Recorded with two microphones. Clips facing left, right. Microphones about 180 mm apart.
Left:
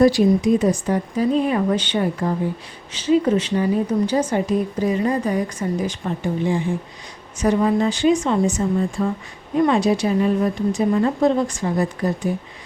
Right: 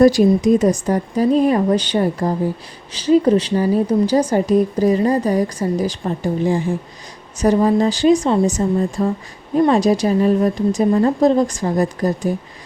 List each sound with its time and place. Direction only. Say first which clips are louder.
0.0 s a woman's voice: right 3 dB; 45° right (ahead or behind)